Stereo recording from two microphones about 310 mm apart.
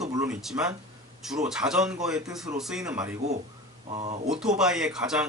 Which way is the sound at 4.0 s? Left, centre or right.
Right.